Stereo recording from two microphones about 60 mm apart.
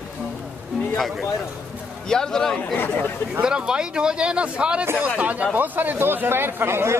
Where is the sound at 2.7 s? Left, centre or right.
Left.